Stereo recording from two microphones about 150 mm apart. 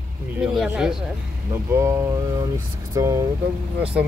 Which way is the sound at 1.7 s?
15° right (ahead or behind).